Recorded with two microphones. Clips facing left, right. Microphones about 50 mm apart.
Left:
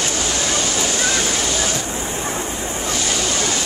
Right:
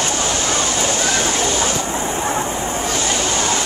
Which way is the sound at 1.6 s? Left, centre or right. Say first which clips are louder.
Right 3 dB; right.